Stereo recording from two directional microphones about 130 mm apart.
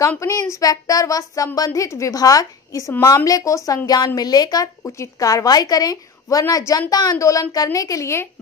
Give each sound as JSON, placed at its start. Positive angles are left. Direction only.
{"t": 0.2, "sound": "speech", "side_deg": 25}